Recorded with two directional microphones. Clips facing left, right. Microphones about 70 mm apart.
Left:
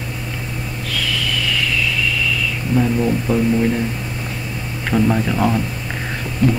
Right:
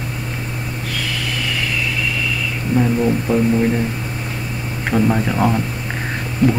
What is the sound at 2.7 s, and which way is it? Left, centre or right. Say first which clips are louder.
Speech: right 1 dB; centre.